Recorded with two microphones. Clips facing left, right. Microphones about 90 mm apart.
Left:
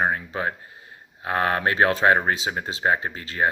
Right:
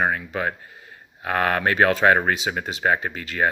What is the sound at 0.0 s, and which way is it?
Speech, 25° left (ahead or behind).